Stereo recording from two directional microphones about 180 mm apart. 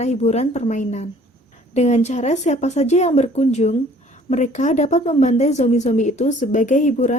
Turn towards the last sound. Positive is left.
turn(degrees=40)  # may be behind; listen again after turning